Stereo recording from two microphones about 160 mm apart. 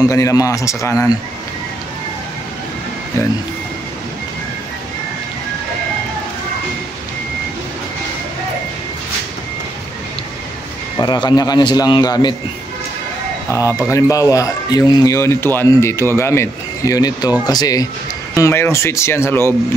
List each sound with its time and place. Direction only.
0.0 s speech: 20° left (ahead or behind)
11.0 s speech: 25° left (ahead or behind)
13.5 s speech: 20° left (ahead or behind)